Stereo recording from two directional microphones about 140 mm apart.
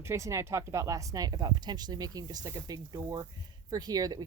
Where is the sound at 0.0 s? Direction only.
20° right (ahead or behind).